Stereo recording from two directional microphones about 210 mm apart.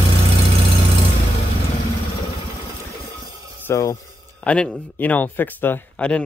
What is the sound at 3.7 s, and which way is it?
Speech, 15° left (ahead or behind).